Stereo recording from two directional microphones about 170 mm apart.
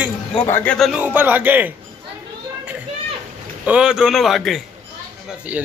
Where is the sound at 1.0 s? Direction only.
10° right (ahead or behind).